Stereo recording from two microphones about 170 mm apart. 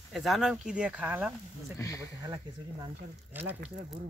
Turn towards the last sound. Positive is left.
turn(degrees=-10)  # may be behind; listen again after turning